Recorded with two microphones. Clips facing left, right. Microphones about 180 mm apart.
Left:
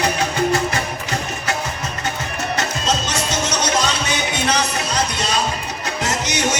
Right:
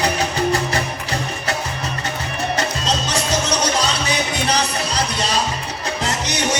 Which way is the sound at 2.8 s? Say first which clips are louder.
Even; 35° right (ahead or behind).